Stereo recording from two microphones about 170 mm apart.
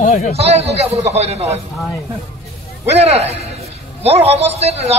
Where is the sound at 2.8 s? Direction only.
40° right (ahead or behind).